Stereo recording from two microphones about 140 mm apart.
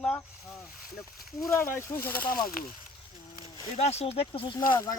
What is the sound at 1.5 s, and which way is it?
Speech, 20° left (ahead or behind).